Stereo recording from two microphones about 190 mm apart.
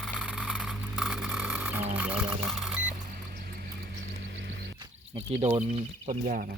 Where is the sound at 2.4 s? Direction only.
5° right (ahead or behind).